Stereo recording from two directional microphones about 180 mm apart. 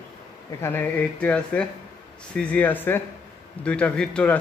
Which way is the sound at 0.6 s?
10° left (ahead or behind).